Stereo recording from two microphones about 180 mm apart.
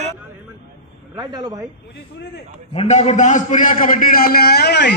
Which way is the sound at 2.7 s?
35° left (ahead or behind).